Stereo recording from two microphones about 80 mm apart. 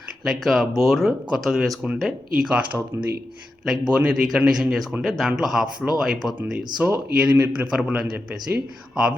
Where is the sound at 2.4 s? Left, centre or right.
Centre.